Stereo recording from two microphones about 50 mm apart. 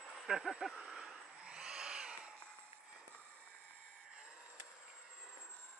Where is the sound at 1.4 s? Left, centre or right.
Centre.